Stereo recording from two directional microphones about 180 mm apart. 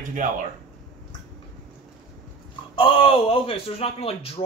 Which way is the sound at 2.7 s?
30° left (ahead or behind).